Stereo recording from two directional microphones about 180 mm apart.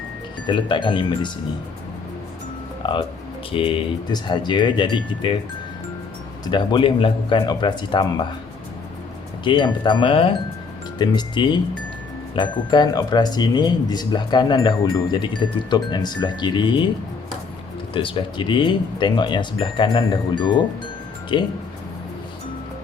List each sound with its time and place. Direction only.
0.4 s speech: 25° left (ahead or behind)
2.8 s speech: 25° left (ahead or behind)
6.4 s speech: 25° left (ahead or behind)
9.4 s speech: 25° left (ahead or behind)
17.9 s speech: 30° left (ahead or behind)